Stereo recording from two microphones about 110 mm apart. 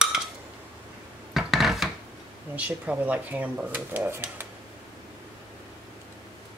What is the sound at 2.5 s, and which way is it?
Speech, 15° right (ahead or behind).